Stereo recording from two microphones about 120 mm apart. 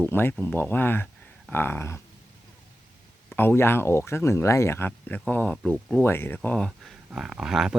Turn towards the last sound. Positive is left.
turn(degrees=-5)  # may be behind; listen again after turning